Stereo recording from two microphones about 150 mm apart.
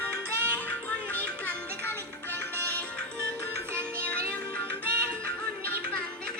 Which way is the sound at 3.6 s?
15° right (ahead or behind).